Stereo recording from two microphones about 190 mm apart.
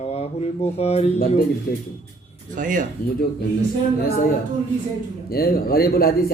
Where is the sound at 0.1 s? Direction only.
35° left (ahead or behind).